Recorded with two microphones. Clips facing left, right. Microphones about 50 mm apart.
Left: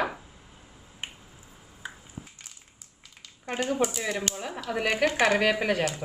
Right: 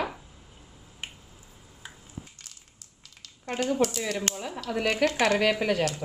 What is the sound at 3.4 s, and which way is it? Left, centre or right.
A woman's voice, centre.